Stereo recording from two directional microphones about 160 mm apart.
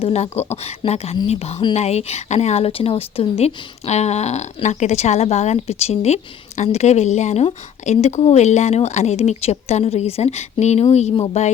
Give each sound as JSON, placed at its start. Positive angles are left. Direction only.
{"t": 0.0, "sound": "a woman's voice", "side_deg": 40}